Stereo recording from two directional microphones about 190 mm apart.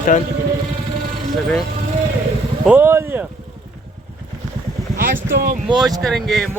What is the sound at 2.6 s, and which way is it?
Speech, 10° right (ahead or behind).